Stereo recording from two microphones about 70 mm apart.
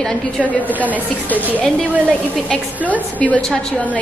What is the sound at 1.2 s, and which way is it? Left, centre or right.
Speech, left.